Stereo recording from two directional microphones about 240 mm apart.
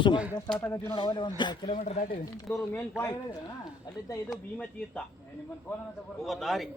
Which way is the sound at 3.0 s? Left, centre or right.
Centre.